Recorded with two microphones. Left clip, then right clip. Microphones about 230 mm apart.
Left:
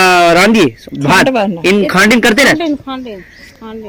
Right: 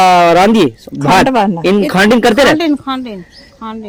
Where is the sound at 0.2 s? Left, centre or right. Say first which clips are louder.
Even; centre.